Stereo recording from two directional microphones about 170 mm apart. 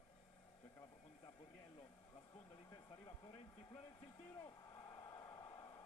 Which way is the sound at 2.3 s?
15° left (ahead or behind).